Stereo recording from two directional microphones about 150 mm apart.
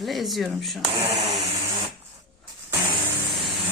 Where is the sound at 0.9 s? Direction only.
25° right (ahead or behind).